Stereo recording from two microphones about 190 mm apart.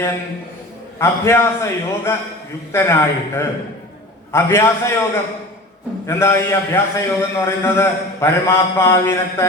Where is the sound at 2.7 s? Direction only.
15° left (ahead or behind).